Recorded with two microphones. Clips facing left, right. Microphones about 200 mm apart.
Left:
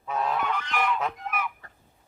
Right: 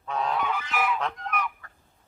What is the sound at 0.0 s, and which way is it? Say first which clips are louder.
Goose: even; 5° left (ahead or behind).